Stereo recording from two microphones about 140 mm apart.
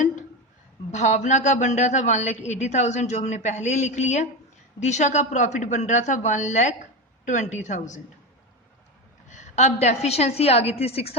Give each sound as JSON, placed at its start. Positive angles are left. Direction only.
{"t": 0.9, "sound": "a man's voice", "side_deg": 55}
{"t": 9.3, "sound": "a woman's voice", "side_deg": 55}